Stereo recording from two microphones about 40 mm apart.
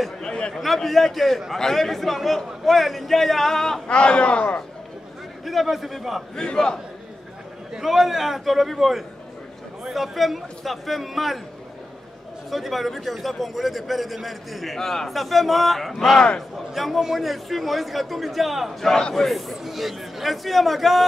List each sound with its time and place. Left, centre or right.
0.2 s chatter: left
0.8 s a man's voice: centre
3.8 s a man's voice: left
5.4 s a man's voice: centre
6.3 s a man's voice: centre
7.8 s a man's voice: centre
12.4 s a man's voice: centre